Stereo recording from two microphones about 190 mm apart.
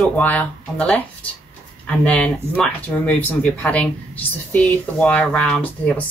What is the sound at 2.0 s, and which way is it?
Speech, 5° left (ahead or behind).